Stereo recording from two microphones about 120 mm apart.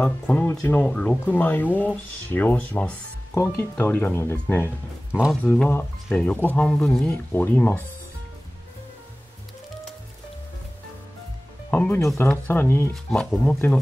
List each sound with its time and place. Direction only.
0.0 s speech: 10° left (ahead or behind)
7.3 s speech: 15° left (ahead or behind)
11.7 s speech: 15° left (ahead or behind)
12.9 s speech: 5° left (ahead or behind)